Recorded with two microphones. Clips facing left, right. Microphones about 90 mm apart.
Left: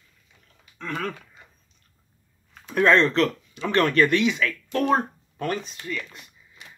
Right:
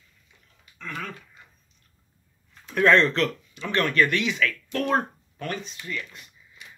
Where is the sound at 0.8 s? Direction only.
55° left (ahead or behind).